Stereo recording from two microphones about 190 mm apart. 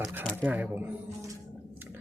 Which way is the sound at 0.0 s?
10° right (ahead or behind).